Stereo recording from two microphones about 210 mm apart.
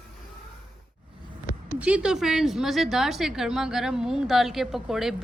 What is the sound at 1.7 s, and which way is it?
A woman's voice, 5° right (ahead or behind).